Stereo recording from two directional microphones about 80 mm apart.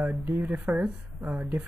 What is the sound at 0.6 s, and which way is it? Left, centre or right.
Speech, centre.